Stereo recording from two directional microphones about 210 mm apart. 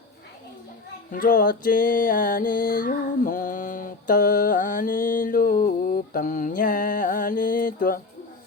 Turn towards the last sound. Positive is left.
turn(degrees=40)  # may be behind; listen again after turning